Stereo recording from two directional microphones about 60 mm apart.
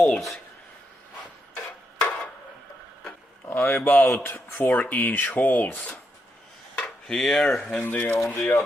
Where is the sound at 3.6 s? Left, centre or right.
Left.